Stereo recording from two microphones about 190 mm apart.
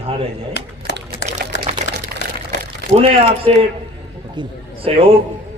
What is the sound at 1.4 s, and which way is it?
Typewriter, 50° right (ahead or behind).